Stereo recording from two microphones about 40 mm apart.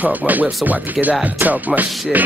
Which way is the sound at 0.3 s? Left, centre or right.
Right.